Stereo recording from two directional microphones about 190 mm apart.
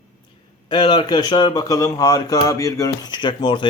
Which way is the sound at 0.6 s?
25° left (ahead or behind).